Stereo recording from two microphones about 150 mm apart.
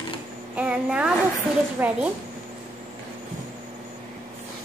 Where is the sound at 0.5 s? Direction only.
5° right (ahead or behind).